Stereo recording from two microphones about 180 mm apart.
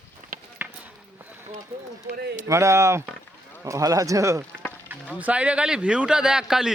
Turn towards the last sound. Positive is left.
turn(degrees=-5)  # may be behind; listen again after turning